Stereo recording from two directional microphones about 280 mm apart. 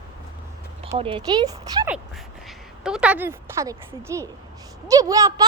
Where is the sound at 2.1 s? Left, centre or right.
Centre.